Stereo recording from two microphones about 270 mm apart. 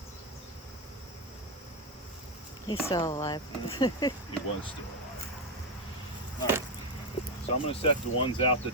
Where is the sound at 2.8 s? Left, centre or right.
Centre.